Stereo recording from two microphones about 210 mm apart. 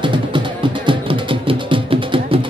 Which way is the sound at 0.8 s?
25° right (ahead or behind).